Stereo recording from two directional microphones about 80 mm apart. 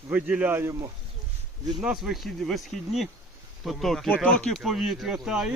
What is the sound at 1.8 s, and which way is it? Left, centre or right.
Speech, centre.